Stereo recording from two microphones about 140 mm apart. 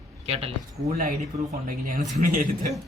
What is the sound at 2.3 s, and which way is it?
Speech, 80° right.